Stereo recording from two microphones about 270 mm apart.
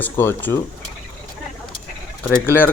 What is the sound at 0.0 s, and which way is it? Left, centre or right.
Speech, centre.